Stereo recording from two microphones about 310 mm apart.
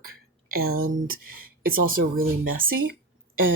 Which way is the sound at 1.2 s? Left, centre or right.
Right.